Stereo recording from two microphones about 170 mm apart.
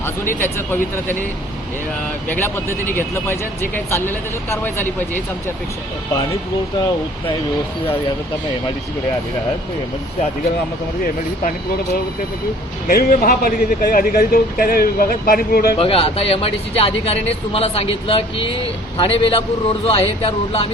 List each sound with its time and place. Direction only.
0.3 s speech: 15° left (ahead or behind)
2.3 s speech: 15° left (ahead or behind)
12.9 s speech: 60° left (ahead or behind)
15.8 s speech: 35° left (ahead or behind)